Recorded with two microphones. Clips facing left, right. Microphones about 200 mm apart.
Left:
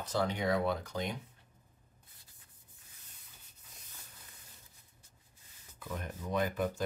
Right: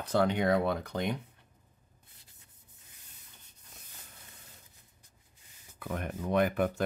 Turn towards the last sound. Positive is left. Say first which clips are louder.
# right 5 dB
turn(degrees=-65)  # may be behind; listen again after turning